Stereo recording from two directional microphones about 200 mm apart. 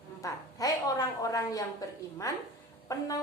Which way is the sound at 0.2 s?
15° left (ahead or behind).